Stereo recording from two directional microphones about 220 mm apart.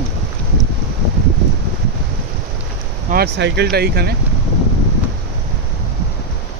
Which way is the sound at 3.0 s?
45° right (ahead or behind).